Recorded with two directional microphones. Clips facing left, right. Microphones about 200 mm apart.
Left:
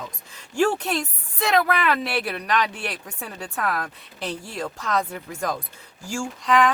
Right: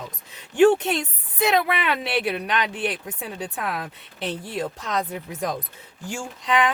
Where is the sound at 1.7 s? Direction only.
Centre (ahead or behind).